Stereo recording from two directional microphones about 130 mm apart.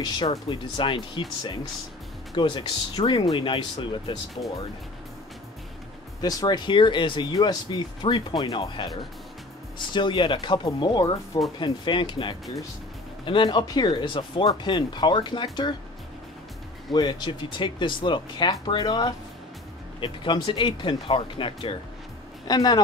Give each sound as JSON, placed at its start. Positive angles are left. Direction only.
{"t": 0.3, "sound": "speech", "side_deg": 40}
{"t": 6.2, "sound": "speech", "side_deg": 35}
{"t": 16.9, "sound": "speech", "side_deg": 35}